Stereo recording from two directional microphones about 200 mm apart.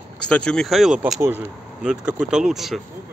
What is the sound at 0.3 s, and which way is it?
Speech, 5° left (ahead or behind).